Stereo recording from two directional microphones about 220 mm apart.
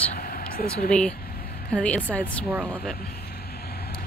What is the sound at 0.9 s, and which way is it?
Speech, 5° left (ahead or behind).